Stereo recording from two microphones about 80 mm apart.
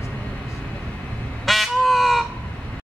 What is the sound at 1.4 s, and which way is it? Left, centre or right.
Crow, centre.